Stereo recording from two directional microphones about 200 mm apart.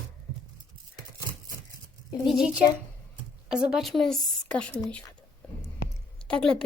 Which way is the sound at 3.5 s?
5° right (ahead or behind).